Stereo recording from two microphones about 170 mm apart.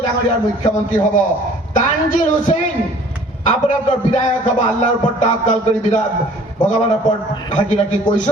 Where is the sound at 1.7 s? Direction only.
50° left (ahead or behind).